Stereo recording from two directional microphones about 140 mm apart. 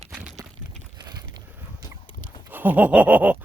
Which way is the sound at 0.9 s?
30° right (ahead or behind).